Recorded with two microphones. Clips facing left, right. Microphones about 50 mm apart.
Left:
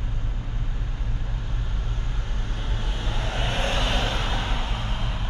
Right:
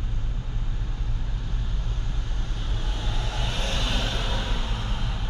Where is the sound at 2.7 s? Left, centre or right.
Left.